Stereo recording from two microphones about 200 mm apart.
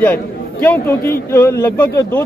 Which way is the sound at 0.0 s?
10° left (ahead or behind).